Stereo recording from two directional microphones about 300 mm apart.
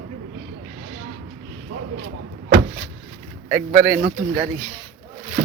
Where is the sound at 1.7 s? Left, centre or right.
Right.